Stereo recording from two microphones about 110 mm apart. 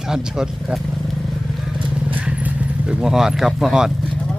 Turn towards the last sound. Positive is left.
turn(degrees=-5)  # may be behind; listen again after turning